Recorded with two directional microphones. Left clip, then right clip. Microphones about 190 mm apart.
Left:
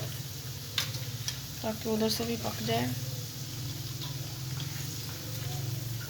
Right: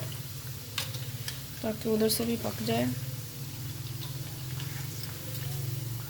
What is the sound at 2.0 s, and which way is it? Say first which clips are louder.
Speech: right 2 dB; 50° right (ahead or behind).